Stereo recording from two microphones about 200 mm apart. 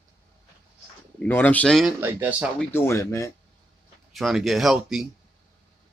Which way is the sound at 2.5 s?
10° left (ahead or behind).